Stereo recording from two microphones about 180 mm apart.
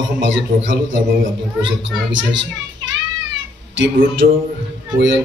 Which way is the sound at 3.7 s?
80° right.